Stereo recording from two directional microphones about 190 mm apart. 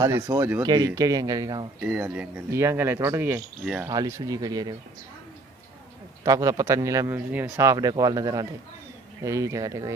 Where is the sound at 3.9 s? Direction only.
20° right (ahead or behind).